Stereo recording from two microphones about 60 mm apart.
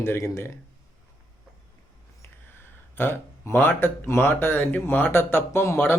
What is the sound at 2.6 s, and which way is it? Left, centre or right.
Speech, left.